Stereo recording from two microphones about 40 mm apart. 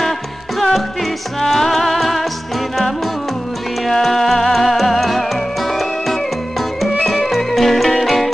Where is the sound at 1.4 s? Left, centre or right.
Centre.